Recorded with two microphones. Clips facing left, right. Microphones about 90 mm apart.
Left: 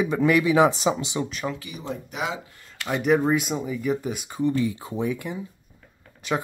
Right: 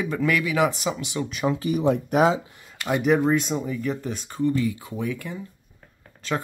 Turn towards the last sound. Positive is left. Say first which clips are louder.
# left 1 dB
turn(degrees=15)  # may be behind; listen again after turning